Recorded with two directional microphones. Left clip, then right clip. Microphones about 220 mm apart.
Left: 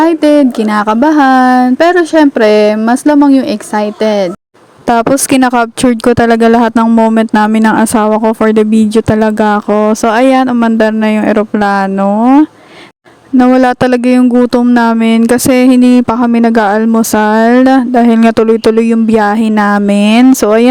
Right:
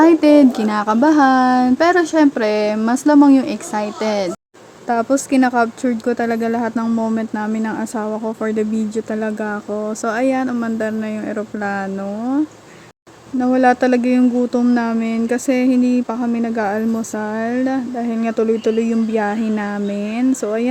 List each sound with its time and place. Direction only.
0.0 s speech: 25° left (ahead or behind)
4.9 s speech: 45° left (ahead or behind)
13.4 s speech: 45° left (ahead or behind)